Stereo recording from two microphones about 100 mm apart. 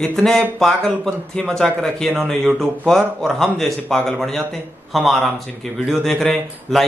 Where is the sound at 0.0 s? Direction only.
5° left (ahead or behind).